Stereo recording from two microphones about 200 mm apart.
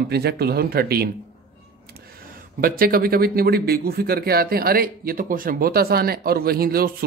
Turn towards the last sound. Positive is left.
turn(degrees=-50)  # may be behind; listen again after turning